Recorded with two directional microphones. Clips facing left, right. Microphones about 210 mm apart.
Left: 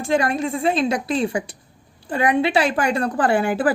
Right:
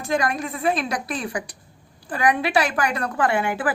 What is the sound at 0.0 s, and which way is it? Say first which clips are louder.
A woman's voice: left 4 dB; 30° left (ahead or behind).